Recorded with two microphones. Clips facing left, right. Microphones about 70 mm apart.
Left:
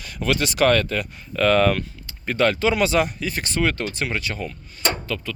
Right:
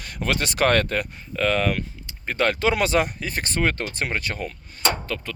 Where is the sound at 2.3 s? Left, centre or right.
Right.